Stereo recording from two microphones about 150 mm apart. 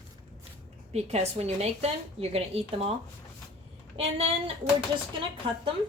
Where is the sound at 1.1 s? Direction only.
45° right (ahead or behind).